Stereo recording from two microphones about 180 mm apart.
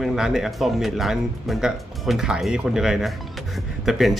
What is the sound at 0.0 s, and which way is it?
Speech, centre (ahead or behind).